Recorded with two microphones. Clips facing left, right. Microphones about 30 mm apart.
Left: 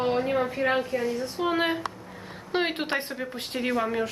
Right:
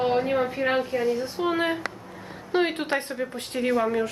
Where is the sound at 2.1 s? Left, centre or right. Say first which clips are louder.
Right 5 dB; centre.